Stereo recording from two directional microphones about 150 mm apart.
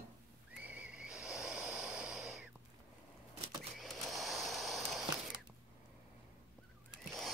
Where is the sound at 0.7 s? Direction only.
10° right (ahead or behind).